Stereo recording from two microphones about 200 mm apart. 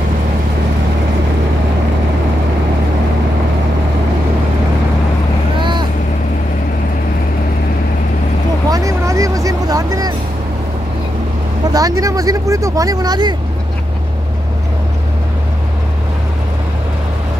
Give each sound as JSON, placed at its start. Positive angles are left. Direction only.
{"t": 5.6, "sound": "vehicle", "side_deg": -25}
{"t": 8.6, "sound": "vehicle", "side_deg": -15}
{"t": 11.7, "sound": "vehicle", "side_deg": -15}